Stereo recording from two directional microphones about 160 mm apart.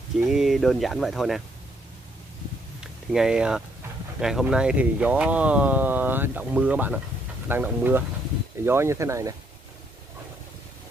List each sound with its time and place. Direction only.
0.3 s speech: centre (ahead or behind)
2.8 s speech: 5° right (ahead or behind)